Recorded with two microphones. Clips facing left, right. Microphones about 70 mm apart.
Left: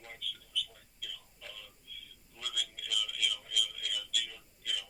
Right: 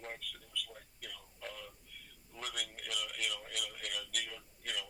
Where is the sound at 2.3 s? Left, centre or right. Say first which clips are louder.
Left 1 dB; right.